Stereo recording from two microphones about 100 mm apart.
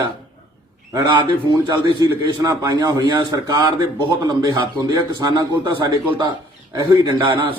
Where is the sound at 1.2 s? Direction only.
45° right (ahead or behind).